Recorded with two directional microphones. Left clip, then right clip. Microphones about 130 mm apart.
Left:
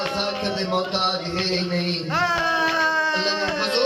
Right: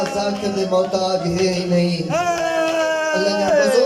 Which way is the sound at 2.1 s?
20° right (ahead or behind).